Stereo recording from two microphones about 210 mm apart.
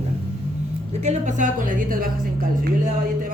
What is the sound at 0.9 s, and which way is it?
A man's voice, 35° right (ahead or behind).